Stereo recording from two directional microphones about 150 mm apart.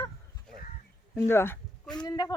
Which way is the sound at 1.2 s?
15° left (ahead or behind).